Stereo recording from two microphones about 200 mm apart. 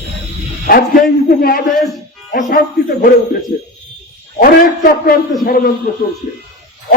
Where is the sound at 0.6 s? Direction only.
50° left (ahead or behind).